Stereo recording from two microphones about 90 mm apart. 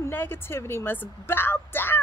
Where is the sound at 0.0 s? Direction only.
25° left (ahead or behind).